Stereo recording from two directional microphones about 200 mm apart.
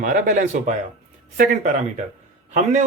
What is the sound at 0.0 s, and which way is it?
A man's voice, 40° right (ahead or behind).